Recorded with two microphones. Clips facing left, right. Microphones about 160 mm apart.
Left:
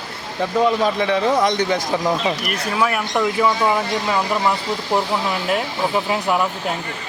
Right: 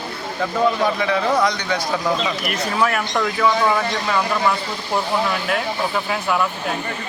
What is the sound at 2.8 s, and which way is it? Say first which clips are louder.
Speech: left 1 dB; 5° left (ahead or behind).